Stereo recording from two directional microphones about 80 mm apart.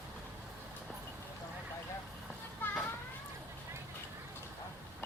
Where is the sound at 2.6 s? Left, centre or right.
Left.